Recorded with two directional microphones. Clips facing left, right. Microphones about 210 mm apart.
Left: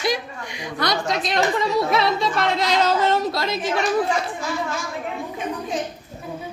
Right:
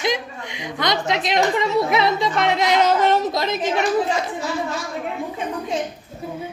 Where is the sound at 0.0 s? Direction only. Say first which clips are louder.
Right 1 dB; 20° right (ahead or behind).